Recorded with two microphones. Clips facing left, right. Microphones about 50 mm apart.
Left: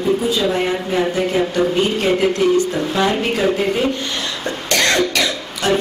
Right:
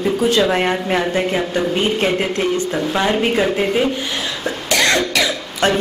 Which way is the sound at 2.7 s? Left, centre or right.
Right.